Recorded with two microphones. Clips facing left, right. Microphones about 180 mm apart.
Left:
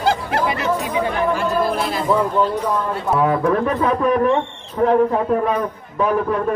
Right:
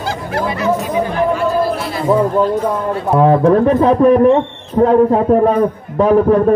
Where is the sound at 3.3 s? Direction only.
30° right (ahead or behind).